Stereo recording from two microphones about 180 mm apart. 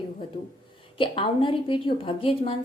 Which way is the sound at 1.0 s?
30° left (ahead or behind).